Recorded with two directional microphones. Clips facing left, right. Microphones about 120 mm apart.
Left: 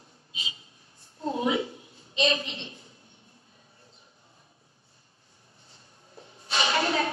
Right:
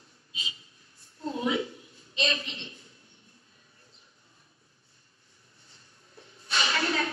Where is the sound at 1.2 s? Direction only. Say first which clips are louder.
Left 2 dB; 25° left (ahead or behind).